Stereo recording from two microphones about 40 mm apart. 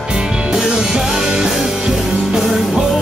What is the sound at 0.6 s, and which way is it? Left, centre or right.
Music, centre.